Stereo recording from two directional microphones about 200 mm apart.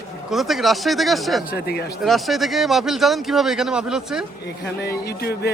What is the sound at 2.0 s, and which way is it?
Speech, centre (ahead or behind).